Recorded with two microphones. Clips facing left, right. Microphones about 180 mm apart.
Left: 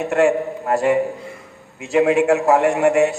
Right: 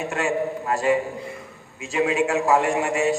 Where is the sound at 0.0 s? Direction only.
60° left (ahead or behind).